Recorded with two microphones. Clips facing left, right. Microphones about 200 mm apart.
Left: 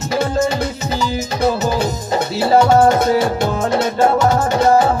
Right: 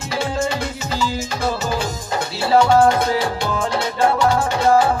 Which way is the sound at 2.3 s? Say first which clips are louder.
Left 2 dB; 45° left (ahead or behind).